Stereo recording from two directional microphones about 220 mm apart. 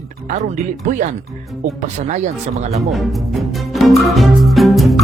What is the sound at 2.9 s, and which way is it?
Speech, centre (ahead or behind).